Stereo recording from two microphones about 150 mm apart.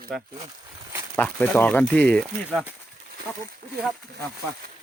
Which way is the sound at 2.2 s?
5° right (ahead or behind).